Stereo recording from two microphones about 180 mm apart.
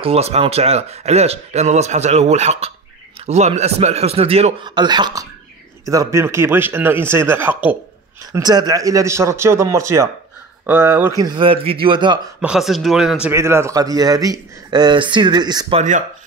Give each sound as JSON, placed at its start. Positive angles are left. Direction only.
{"t": 0.0, "sound": "speech", "side_deg": -35}
{"t": 4.6, "sound": "a man's voice", "side_deg": -25}
{"t": 12.4, "sound": "speech", "side_deg": -5}
{"t": 13.3, "sound": "a man's voice", "side_deg": -15}